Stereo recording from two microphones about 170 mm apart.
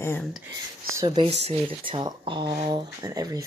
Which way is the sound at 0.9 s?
25° right (ahead or behind).